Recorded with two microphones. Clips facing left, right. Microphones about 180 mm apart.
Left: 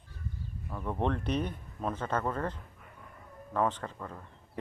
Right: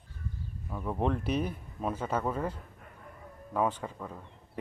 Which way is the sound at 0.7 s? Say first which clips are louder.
Right 1 dB; 5° right (ahead or behind).